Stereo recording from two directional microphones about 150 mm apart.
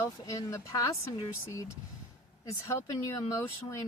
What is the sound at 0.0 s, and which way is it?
Speech, 20° left (ahead or behind).